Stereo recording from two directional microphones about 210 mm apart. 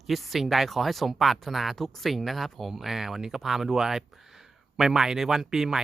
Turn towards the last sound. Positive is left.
turn(degrees=0)  # may be behind; listen again after turning